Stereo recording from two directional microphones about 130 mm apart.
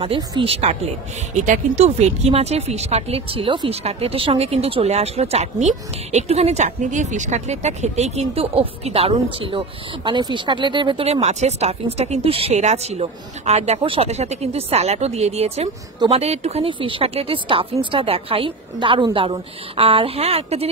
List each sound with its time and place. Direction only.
0.4 s speech: 50° right (ahead or behind)
1.4 s speech: 65° right (ahead or behind); by 11.1 s 40° right (ahead or behind)
11.1 s speech: 55° right (ahead or behind)
13.7 s speech: 45° right (ahead or behind)